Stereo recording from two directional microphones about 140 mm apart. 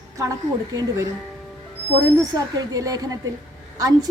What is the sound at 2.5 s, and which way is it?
Speech, 25° right (ahead or behind).